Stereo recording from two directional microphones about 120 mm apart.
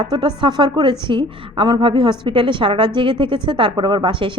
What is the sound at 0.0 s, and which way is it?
A woman's voice, 40° right (ahead or behind).